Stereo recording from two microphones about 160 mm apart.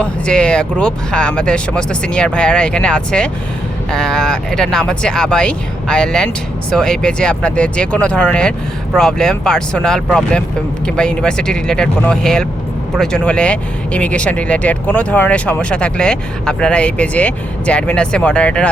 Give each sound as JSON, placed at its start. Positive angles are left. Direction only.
{"t": 0.0, "sound": "speech", "side_deg": 5}